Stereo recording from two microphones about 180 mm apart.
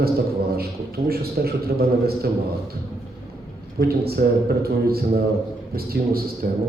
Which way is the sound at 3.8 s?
60° right (ahead or behind).